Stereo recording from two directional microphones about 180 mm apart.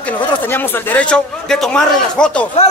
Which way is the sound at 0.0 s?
10° left (ahead or behind).